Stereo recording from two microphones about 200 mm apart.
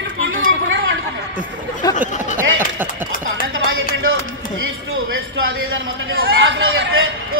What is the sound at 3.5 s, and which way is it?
Music, 85° right.